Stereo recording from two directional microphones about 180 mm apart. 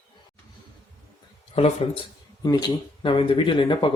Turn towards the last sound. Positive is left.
turn(degrees=25)  # may be behind; listen again after turning